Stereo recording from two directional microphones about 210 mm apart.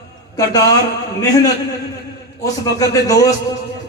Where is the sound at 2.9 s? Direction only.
15° left (ahead or behind).